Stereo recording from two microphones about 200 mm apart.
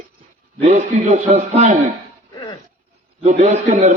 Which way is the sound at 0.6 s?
35° right (ahead or behind).